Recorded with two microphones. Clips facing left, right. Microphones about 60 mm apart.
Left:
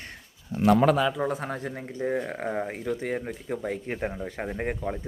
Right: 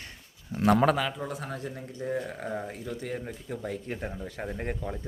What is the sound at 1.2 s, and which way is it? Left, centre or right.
Speech, left.